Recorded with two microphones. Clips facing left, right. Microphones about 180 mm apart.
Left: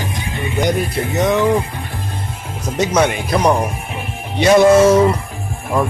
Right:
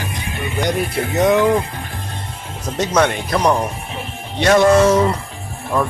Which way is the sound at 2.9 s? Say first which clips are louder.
Even; 10° left (ahead or behind).